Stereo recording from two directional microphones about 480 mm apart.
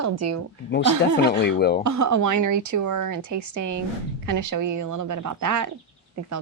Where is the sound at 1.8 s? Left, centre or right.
Right.